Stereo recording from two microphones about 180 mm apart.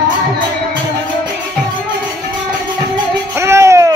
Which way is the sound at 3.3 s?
15° right (ahead or behind).